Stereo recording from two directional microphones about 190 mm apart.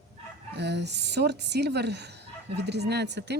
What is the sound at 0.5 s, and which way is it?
Speech, 65° right (ahead or behind).